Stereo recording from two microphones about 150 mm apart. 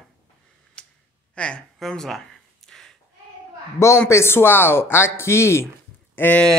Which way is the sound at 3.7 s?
20° left (ahead or behind).